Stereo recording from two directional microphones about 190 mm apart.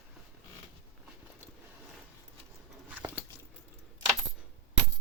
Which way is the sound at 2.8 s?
10° right (ahead or behind).